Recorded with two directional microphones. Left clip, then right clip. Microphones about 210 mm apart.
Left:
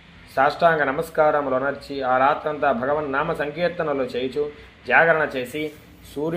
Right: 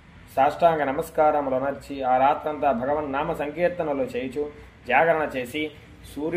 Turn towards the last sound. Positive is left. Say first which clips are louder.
# left 3 dB
turn(degrees=15)  # may be behind; listen again after turning